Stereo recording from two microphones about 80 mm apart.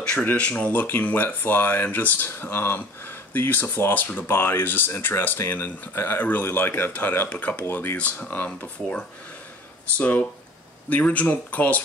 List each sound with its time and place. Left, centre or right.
0.0 s speech: centre